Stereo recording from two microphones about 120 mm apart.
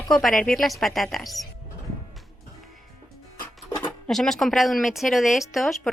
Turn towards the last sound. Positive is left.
turn(degrees=0)  # may be behind; listen again after turning